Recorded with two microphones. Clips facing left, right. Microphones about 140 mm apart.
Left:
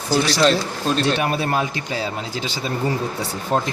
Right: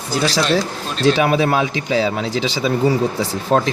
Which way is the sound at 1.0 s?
90° right.